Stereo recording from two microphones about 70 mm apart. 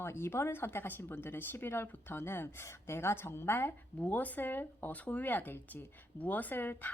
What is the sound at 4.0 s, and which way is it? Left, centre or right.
Speech, left.